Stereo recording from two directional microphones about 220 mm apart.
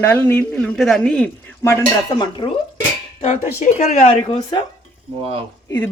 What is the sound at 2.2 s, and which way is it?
A woman's voice, 20° left (ahead or behind).